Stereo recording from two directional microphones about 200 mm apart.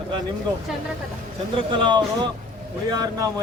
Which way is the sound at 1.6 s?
25° right (ahead or behind).